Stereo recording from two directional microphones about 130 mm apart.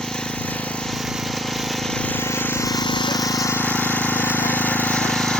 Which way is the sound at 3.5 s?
15° left (ahead or behind).